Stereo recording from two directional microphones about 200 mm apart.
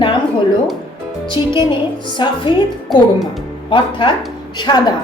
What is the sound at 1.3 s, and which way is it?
A woman's voice, 25° left (ahead or behind).